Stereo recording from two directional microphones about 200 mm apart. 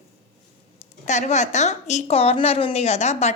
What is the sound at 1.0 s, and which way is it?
A woman's voice, 35° left (ahead or behind).